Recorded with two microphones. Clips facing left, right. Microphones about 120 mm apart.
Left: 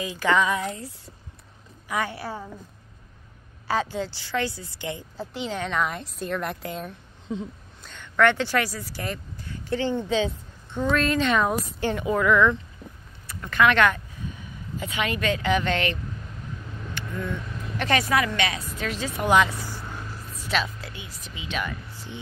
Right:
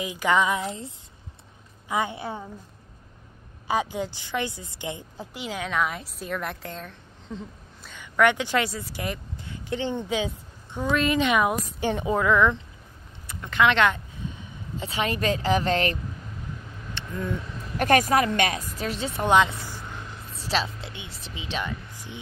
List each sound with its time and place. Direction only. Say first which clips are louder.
0.0 s speech: even; 15° right (ahead or behind)
3.6 s a woman's voice: even; 15° right (ahead or behind)
14.8 s a woman's voice: right 1 dB; 35° right (ahead or behind)
16.9 s speech: right 1 dB; 20° right (ahead or behind)
17.7 s speech: right 3 dB; 45° right (ahead or behind)
18.8 s a woman's voice: left 2 dB; 35° right (ahead or behind)
19.1 s speech: even; 20° right (ahead or behind)
19.8 s a sound: left 2 dB; 5° left (ahead or behind)
20.3 s a woman's voice: even; 30° right (ahead or behind)
21.9 s a sound: left 1 dB; 15° right (ahead or behind)